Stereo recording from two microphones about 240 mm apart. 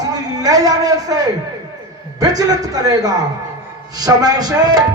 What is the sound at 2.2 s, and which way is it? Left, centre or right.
A man's voice, centre.